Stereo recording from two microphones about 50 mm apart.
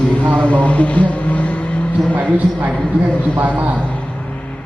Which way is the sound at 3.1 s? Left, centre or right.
Left.